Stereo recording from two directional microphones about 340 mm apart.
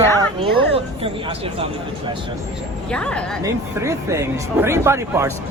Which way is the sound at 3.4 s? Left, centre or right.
Centre.